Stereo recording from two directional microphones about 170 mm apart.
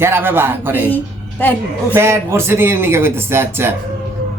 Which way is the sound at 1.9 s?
15° right (ahead or behind).